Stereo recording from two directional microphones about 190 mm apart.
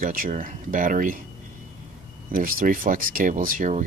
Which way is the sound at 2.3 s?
45° right (ahead or behind).